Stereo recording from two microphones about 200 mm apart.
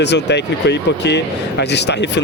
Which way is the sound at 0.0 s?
60° left (ahead or behind).